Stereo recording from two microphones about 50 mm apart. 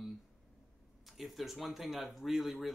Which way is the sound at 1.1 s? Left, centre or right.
Centre.